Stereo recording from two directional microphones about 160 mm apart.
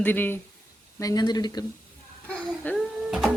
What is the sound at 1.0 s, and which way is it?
Speech, 25° left (ahead or behind).